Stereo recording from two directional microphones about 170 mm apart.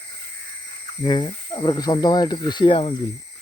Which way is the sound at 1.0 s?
25° left (ahead or behind).